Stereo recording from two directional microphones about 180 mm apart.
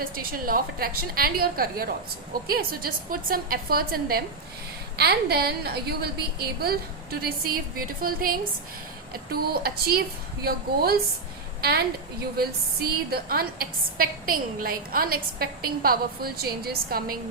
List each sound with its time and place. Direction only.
0.0 s a woman's voice: 55° right (ahead or behind)
12.4 s a woman's voice: 60° right (ahead or behind)